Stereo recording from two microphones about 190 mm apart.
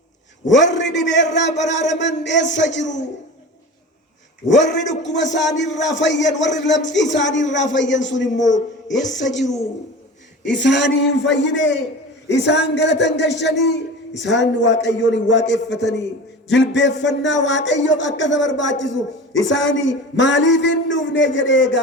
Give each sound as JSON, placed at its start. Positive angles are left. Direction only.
{"t": 0.4, "sound": "a man's voice", "side_deg": 70}
{"t": 2.8, "sound": "a man's voice", "side_deg": 40}
{"t": 4.4, "sound": "a man's voice", "side_deg": 70}
{"t": 10.4, "sound": "a man's voice", "side_deg": 70}